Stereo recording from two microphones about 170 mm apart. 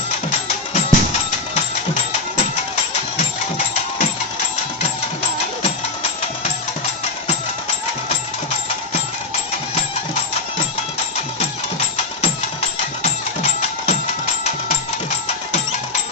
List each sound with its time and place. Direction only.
0.3 s music: 50° left (ahead or behind)
13.0 s music: 40° left (ahead or behind)